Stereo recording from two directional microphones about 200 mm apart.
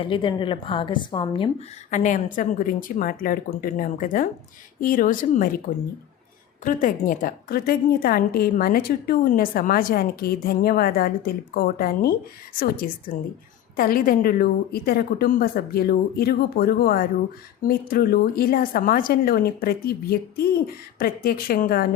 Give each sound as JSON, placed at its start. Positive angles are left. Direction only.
{"t": 0.0, "sound": "a woman's voice", "side_deg": 25}
{"t": 1.9, "sound": "a woman's voice", "side_deg": 40}